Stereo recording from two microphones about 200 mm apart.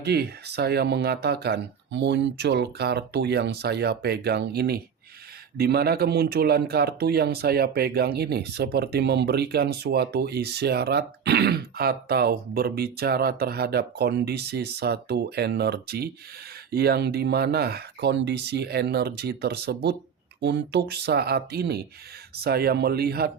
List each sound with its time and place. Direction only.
0.0 s speech: 55° right (ahead or behind)